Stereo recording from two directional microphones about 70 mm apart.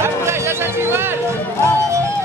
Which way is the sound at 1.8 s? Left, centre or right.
Right.